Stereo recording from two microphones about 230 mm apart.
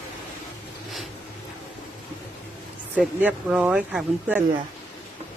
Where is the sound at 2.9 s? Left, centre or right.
Centre.